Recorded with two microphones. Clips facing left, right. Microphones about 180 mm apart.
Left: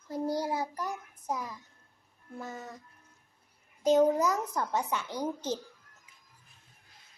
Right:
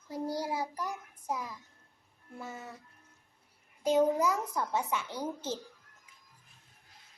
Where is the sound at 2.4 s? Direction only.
10° right (ahead or behind).